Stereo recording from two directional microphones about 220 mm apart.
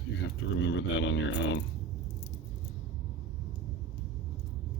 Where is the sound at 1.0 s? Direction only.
55° left (ahead or behind).